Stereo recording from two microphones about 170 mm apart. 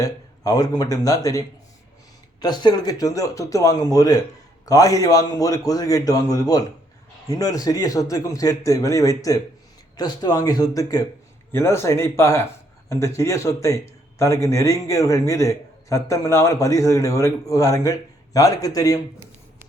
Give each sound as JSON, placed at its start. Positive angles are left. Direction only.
{"t": 0.0, "sound": "a man's voice", "side_deg": 20}